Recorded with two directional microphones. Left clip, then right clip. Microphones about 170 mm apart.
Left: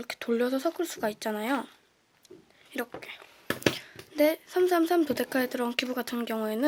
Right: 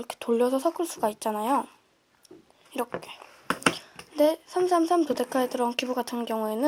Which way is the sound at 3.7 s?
25° left (ahead or behind).